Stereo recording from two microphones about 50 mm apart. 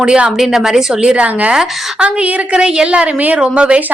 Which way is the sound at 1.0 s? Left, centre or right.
Right.